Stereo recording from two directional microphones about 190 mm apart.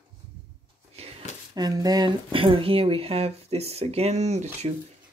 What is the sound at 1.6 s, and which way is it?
Speech, 20° right (ahead or behind).